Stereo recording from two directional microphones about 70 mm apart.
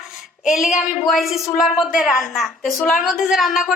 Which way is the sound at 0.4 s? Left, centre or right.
Centre.